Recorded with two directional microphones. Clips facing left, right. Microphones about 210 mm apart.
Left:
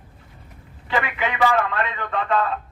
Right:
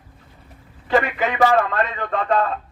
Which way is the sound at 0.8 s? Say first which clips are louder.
Right 5 dB; 40° right (ahead or behind).